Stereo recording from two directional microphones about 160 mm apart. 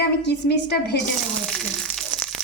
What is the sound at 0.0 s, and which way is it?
Speech, 90° left.